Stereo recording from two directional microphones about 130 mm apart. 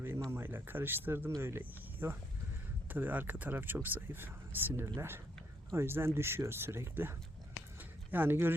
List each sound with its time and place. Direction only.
0.3 s speech: 15° right (ahead or behind)